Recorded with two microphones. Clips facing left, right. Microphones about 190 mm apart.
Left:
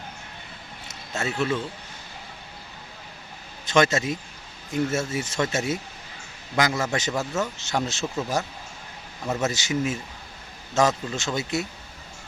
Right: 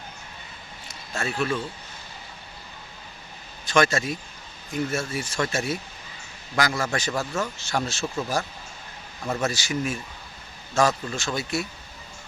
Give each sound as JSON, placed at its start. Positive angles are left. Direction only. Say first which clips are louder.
{"t": 0.9, "sound": "a sound", "louder": "left 1 dB", "side_deg": 20}
{"t": 3.7, "sound": "speech", "louder": "left 1 dB", "side_deg": 20}
{"t": 8.0, "sound": "speech", "louder": "even", "side_deg": 5}
{"t": 9.4, "sound": "speech", "louder": "left 2 dB", "side_deg": 20}